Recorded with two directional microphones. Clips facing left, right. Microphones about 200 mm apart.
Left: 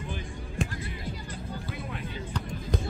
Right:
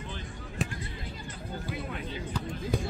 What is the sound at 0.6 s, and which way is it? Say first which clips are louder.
Basketball bounce: left 2 dB; centre (ahead or behind).